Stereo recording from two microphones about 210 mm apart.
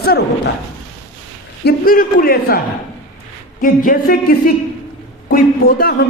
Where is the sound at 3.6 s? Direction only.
40° left (ahead or behind).